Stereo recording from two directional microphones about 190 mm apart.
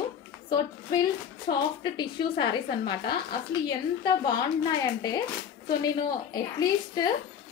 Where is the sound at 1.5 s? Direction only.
55° left (ahead or behind).